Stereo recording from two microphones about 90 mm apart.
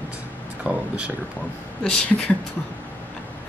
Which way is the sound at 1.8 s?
10° left (ahead or behind).